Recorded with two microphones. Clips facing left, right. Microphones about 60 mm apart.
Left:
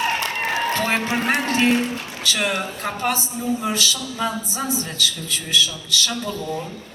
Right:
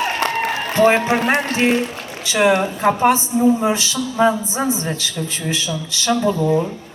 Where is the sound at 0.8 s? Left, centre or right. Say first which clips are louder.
Right 8 dB; right.